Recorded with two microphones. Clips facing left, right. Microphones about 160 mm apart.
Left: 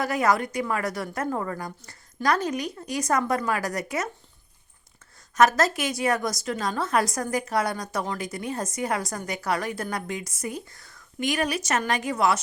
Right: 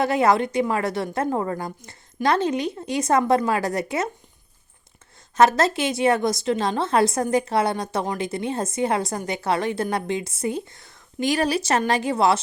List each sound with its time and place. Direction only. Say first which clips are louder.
0.0 s a woman's voice: right 4 dB; 25° right (ahead or behind)
5.3 s a woman's voice: right 3 dB; 30° right (ahead or behind)